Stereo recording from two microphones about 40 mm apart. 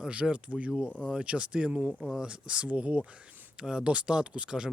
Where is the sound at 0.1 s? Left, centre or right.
Right.